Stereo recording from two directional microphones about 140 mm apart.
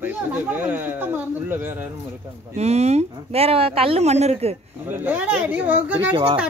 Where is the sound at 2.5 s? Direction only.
50° right (ahead or behind).